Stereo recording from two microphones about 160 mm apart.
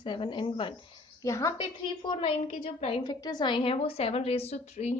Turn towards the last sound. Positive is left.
turn(degrees=45)  # may be behind; listen again after turning